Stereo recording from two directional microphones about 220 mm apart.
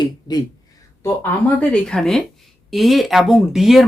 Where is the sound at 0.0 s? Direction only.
20° left (ahead or behind).